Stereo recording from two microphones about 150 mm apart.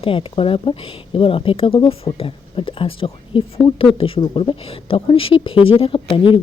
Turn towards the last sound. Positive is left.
turn(degrees=35)  # may be behind; listen again after turning